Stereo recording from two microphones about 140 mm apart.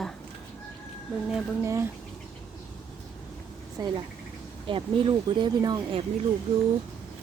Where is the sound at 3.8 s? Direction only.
25° right (ahead or behind).